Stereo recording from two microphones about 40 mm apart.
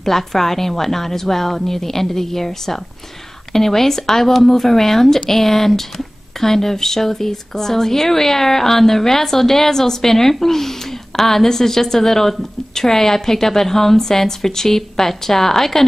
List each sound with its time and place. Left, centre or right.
0.0 s speech: centre